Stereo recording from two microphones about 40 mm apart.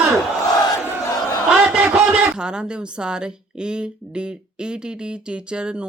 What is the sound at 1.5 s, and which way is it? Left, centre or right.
Speech, right.